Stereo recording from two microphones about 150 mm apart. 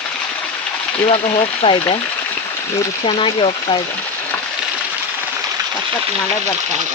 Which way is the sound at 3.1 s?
35° left (ahead or behind).